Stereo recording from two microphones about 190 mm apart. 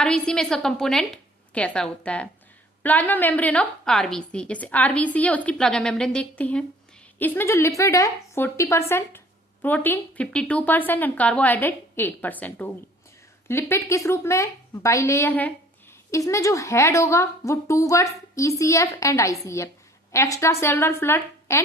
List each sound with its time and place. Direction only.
0.0 s a woman's voice: 5° left (ahead or behind)